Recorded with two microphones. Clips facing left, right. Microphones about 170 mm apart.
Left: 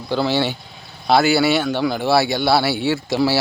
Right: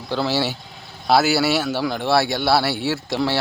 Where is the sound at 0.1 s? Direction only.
Centre (ahead or behind).